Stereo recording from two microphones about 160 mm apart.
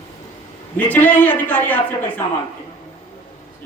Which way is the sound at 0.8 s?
10° left (ahead or behind).